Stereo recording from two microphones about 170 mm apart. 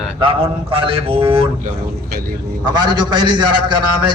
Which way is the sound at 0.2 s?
30° right (ahead or behind).